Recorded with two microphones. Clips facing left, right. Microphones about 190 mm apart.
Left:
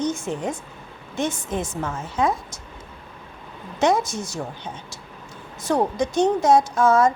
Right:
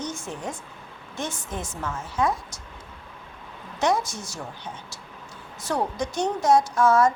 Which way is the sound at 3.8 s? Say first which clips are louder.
Left 4 dB; 20° left (ahead or behind).